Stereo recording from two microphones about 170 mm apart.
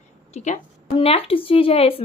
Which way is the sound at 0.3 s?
45° left (ahead or behind).